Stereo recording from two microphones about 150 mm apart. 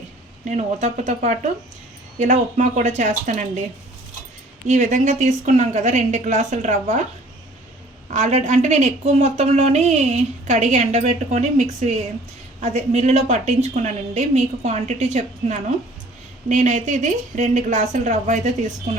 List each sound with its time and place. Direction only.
0.4 s a woman's voice: 50° right (ahead or behind)
4.7 s a woman's voice: 50° right (ahead or behind)
8.1 s a woman's voice: 50° right (ahead or behind)